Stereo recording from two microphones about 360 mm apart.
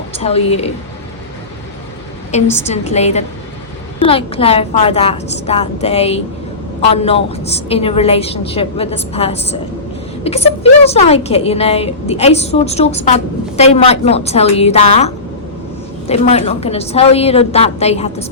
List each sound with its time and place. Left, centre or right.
0.2 s a woman's voice: centre
2.3 s a woman's voice: centre